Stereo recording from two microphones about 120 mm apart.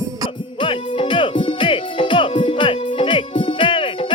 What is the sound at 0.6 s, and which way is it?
Music, 45° left (ahead or behind).